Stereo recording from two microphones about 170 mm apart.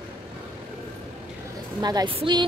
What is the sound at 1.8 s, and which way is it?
Speech, 25° right (ahead or behind).